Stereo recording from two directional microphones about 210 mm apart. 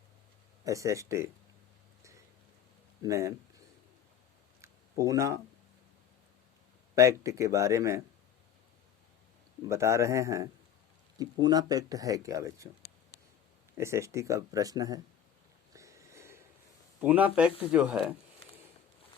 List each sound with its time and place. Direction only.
0.6 s speech: 15° right (ahead or behind)
3.0 s speech: 15° right (ahead or behind)
4.6 s a sound: 15° right (ahead or behind)
6.9 s speech: 15° right (ahead or behind)
9.6 s speech: 15° right (ahead or behind)
13.7 s speech: 15° right (ahead or behind)
15.7 s a sound: 15° right (ahead or behind)
17.0 s speech: 10° right (ahead or behind)